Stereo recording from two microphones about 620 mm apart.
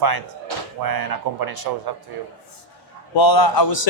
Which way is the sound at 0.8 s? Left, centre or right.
Right.